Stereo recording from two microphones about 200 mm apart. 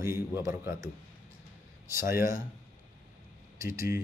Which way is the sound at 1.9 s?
15° right (ahead or behind).